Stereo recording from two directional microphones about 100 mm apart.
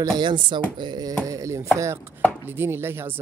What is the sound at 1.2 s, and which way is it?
Chopping, 35° right (ahead or behind).